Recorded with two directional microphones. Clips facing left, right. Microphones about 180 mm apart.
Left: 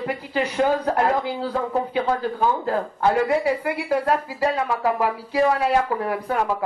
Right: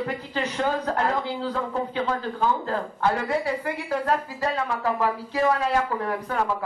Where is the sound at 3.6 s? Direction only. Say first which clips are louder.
Left 4 dB; 10° left (ahead or behind).